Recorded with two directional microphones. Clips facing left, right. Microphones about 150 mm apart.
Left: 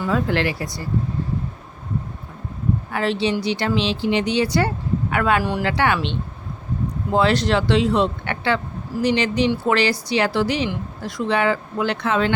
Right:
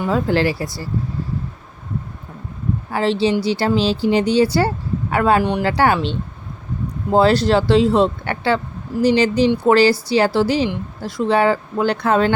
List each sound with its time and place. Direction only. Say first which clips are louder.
0.1 s speech: right 3 dB; 30° right (ahead or behind)
2.9 s speech: right 5 dB; 30° right (ahead or behind)
5.4 s speech: right 4 dB; 20° right (ahead or behind)
5.6 s speech: right 4 dB; 35° right (ahead or behind)